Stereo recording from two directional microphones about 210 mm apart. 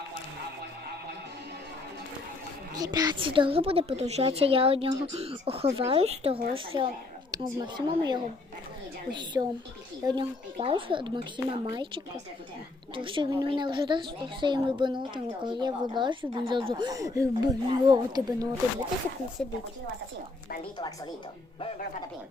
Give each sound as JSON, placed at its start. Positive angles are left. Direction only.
{"t": 2.7, "sound": "a woman's voice", "side_deg": -20}
{"t": 19.4, "sound": "a woman's voice", "side_deg": 5}